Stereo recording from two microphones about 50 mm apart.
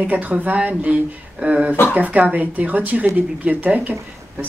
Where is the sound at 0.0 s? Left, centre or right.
Right.